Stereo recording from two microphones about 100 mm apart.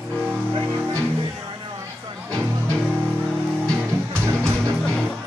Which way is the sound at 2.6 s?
5° left (ahead or behind).